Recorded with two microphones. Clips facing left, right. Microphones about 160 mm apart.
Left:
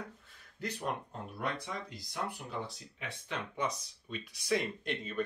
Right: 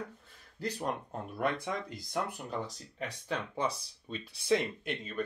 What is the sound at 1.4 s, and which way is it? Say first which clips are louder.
Speech: right 5 dB; 50° right (ahead or behind).